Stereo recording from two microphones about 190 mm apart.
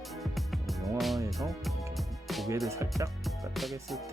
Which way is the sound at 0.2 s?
Centre (ahead or behind).